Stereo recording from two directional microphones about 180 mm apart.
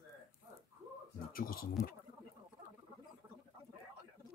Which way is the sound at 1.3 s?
55° left (ahead or behind).